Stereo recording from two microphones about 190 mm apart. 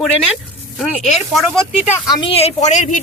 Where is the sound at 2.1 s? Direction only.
25° left (ahead or behind).